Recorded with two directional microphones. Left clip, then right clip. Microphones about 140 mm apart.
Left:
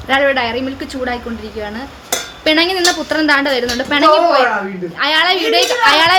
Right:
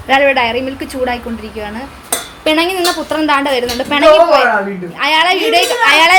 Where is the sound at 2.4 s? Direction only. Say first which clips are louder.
Even; 20° left (ahead or behind).